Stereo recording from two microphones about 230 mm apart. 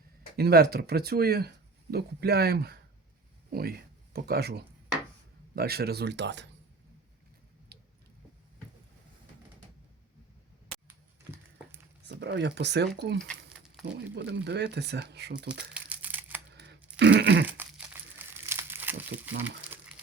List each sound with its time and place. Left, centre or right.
0.3 s speech: right
12.0 s speech: right
13.1 s crumpling: centre
13.8 s speech: right
15.7 s crumpling: centre
16.6 s a sound: right
17.4 s crumpling: centre